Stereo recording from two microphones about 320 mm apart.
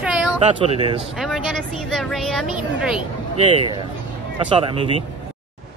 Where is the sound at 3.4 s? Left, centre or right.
Centre.